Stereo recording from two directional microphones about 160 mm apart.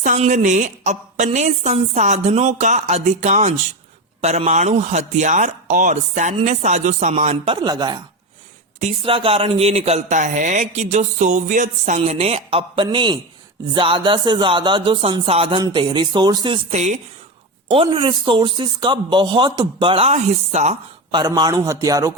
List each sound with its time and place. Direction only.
0.3 s a man's voice: 50° right (ahead or behind); by 8.0 s 25° right (ahead or behind)
8.8 s a man's voice: 40° right (ahead or behind)
16.7 s a man's voice: 45° right (ahead or behind)
17.7 s speech: 35° right (ahead or behind)
21.1 s speech: 25° right (ahead or behind)